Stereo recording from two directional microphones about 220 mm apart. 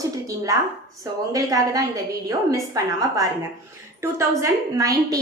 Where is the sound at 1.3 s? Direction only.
15° right (ahead or behind).